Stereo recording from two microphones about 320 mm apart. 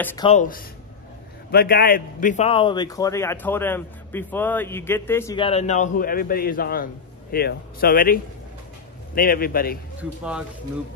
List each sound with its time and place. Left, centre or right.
0.0 s speech: centre
0.3 s a man's voice: left